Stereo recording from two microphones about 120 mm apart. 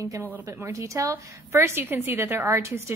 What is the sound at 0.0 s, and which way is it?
A woman's voice, 25° right (ahead or behind).